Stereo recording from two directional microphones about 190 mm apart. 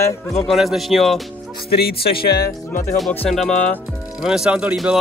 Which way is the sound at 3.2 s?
5° left (ahead or behind).